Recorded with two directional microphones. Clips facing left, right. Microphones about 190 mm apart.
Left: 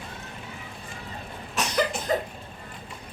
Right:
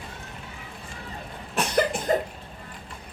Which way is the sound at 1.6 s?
55° right (ahead or behind).